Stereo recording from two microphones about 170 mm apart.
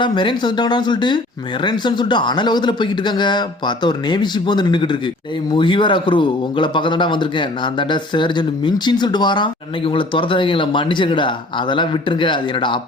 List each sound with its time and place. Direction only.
0.0 s speech: 30° left (ahead or behind)